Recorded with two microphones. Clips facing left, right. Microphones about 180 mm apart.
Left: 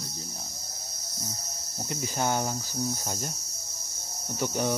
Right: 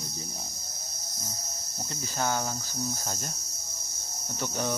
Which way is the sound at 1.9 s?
20° left (ahead or behind).